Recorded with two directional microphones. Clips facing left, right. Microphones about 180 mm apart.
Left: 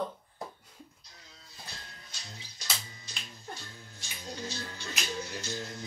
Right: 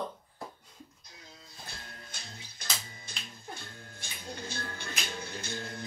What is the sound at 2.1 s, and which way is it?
Music, 55° right (ahead or behind).